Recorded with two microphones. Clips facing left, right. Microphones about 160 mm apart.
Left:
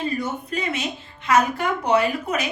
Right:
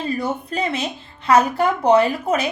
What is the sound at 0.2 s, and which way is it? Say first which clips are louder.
A woman's voice: right 4 dB; 30° right (ahead or behind).